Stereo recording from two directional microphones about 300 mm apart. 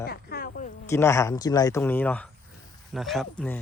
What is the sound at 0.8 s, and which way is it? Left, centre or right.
Speech, centre.